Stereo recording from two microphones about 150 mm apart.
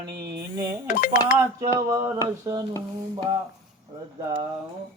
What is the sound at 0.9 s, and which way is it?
Speech, 60° left (ahead or behind).